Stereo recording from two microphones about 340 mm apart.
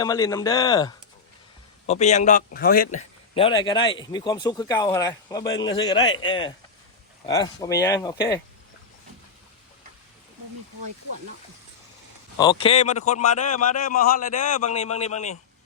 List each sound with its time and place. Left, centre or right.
0.0 s a man's voice: centre
12.4 s a man's voice: centre